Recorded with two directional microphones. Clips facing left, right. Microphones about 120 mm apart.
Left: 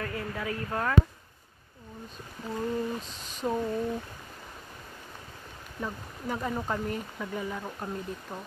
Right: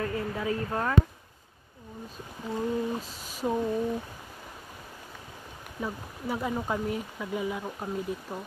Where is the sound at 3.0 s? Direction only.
5° right (ahead or behind).